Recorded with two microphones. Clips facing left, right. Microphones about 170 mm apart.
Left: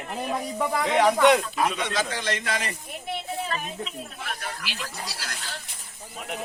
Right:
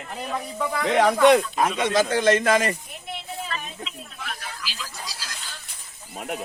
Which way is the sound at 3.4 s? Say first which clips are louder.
Left 2 dB; 40° left (ahead or behind).